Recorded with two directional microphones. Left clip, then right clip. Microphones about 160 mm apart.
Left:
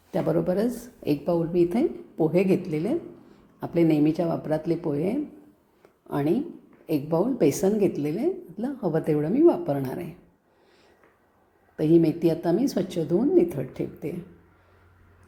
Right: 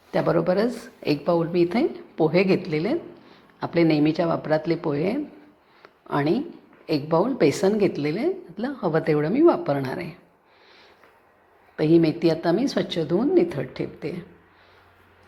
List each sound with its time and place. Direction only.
0.1 s a woman's voice: 10° left (ahead or behind)
11.8 s a woman's voice: 10° left (ahead or behind)
13.0 s a woman's voice: 10° right (ahead or behind)
13.3 s a woman's voice: 10° left (ahead or behind)